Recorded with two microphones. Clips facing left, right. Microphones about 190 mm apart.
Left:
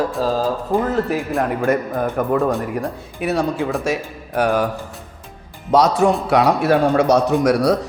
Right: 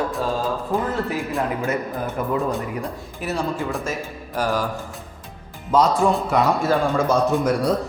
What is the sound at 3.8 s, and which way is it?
Speech, 70° left (ahead or behind).